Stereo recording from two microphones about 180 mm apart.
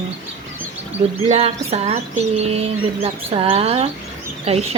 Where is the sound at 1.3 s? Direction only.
35° right (ahead or behind).